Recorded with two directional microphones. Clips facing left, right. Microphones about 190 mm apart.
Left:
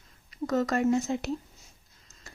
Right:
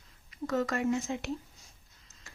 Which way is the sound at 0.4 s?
40° left (ahead or behind).